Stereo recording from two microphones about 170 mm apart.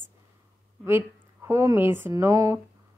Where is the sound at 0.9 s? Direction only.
15° right (ahead or behind).